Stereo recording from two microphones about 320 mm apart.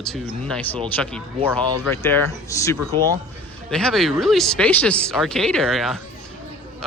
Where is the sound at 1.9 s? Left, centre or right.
Centre.